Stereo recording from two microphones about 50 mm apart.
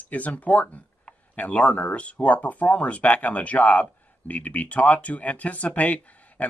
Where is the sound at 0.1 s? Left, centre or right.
Left.